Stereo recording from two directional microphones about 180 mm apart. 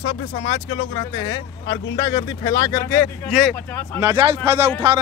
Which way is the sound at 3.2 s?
Centre (ahead or behind).